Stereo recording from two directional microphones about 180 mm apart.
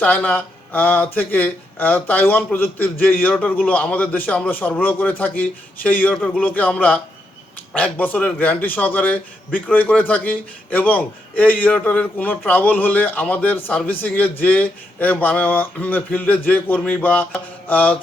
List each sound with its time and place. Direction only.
0.0 s a man's voice: 10° left (ahead or behind)
17.7 s mantra: 10° left (ahead or behind)